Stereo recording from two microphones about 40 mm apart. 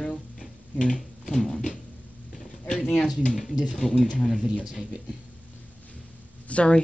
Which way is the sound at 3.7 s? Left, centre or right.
Centre.